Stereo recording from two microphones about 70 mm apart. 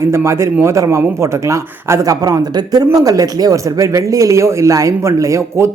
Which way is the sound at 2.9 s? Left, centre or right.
Right.